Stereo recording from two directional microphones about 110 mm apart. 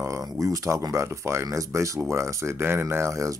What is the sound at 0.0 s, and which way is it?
Speech, 30° right (ahead or behind).